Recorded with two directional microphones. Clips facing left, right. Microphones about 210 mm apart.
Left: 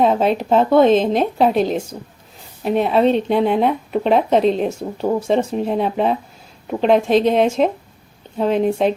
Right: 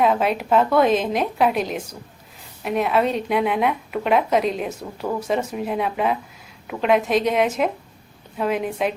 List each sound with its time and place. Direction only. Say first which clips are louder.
0.0 s a woman's voice: left 4 dB; 30° left (ahead or behind)